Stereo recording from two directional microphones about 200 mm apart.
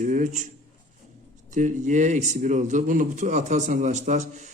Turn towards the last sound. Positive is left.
turn(degrees=-35)  # may be behind; listen again after turning